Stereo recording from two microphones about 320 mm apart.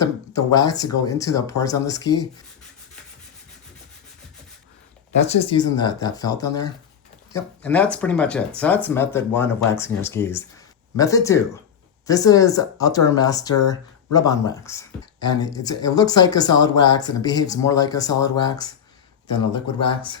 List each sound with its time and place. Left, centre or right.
0.0 s speech: centre
5.5 s speech: centre
19.8 s speech: centre